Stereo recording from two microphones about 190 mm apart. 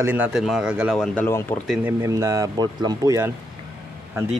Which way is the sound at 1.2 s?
15° left (ahead or behind).